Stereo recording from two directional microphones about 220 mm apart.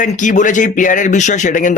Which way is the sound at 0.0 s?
35° left (ahead or behind).